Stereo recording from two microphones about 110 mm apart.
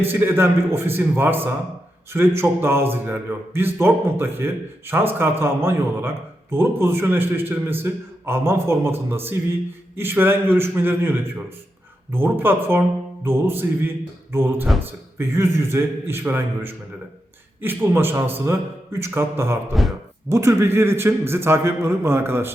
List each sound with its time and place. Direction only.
0.0 s a man's voice: 20° right (ahead or behind)
17.6 s a man's voice: 20° right (ahead or behind)
19.7 s speech: centre (ahead or behind)
20.3 s a man's voice: 25° right (ahead or behind)